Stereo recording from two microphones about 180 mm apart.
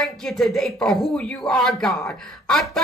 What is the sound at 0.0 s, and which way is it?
A woman's voice, centre (ahead or behind).